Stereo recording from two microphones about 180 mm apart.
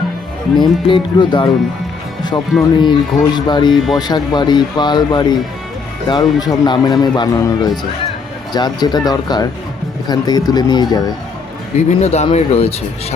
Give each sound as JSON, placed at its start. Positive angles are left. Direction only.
{"t": 0.5, "sound": "a man's voice", "side_deg": 25}
{"t": 2.6, "sound": "a man's voice", "side_deg": 25}
{"t": 11.9, "sound": "speech", "side_deg": 40}